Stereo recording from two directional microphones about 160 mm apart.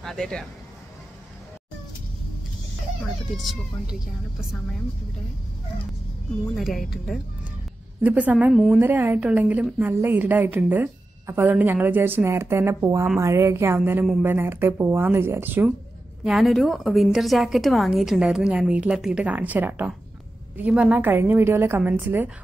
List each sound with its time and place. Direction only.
0.0 s speech: 5° left (ahead or behind)
3.3 s a woman's voice: centre (ahead or behind)
6.5 s a woman's voice: centre (ahead or behind)
16.3 s a woman's voice: centre (ahead or behind)